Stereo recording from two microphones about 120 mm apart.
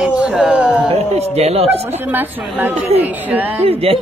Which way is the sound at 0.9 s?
60° right (ahead or behind).